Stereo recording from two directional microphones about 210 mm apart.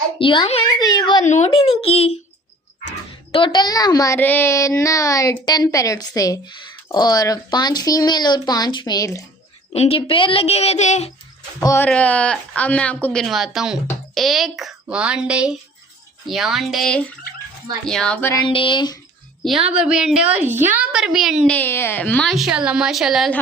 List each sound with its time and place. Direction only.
0.2 s a child's voice: 25° left (ahead or behind)
1.2 s speech: 35° left (ahead or behind)
3.3 s a woman's voice: 20° left (ahead or behind)
9.7 s speech: 30° left (ahead or behind)
11.6 s a woman's voice: 10° left (ahead or behind)
18.3 s speech: 25° left (ahead or behind)
19.7 s a woman's voice: 5° right (ahead or behind)